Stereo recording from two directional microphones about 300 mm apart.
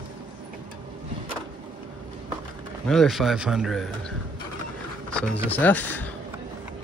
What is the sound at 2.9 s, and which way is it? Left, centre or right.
Speech, centre.